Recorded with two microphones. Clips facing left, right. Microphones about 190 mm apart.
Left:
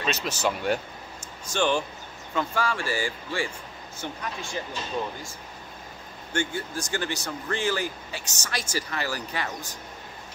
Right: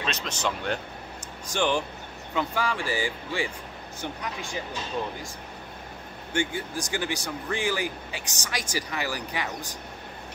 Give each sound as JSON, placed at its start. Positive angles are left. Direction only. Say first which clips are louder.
{"t": 0.0, "sound": "speech", "louder": "left 3 dB", "side_deg": 5}
{"t": 1.5, "sound": "speech", "louder": "left 1 dB", "side_deg": -15}
{"t": 6.3, "sound": "speech", "louder": "right 1 dB", "side_deg": -15}